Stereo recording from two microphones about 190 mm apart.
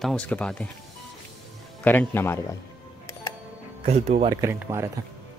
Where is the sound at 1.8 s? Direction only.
10° left (ahead or behind).